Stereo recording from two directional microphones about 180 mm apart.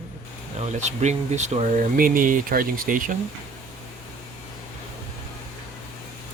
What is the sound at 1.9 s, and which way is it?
Speech, 50° right (ahead or behind).